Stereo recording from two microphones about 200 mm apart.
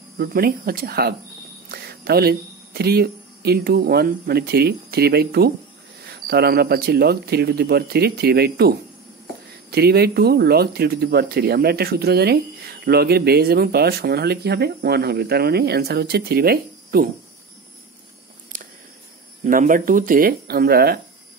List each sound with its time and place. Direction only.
0.2 s speech: 50° right (ahead or behind)
18.5 s a sound: 40° right (ahead or behind)
19.4 s speech: 40° right (ahead or behind)